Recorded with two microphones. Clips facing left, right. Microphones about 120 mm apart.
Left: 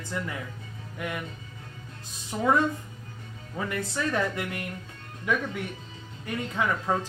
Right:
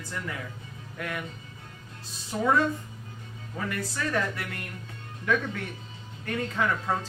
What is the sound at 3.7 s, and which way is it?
Speech, 20° left (ahead or behind).